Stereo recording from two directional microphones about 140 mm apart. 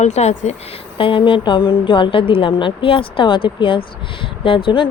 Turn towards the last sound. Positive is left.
turn(degrees=35)  # may be behind; listen again after turning